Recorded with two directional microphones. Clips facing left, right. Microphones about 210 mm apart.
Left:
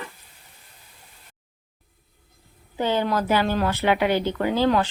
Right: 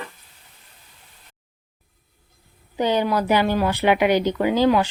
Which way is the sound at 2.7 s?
15° right (ahead or behind).